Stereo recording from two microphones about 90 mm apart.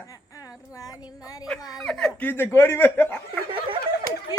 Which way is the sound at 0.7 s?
40° left (ahead or behind).